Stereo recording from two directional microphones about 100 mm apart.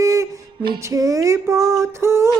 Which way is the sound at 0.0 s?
30° right (ahead or behind).